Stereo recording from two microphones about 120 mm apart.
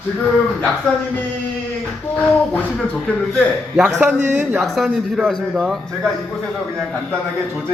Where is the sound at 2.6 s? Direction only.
10° left (ahead or behind).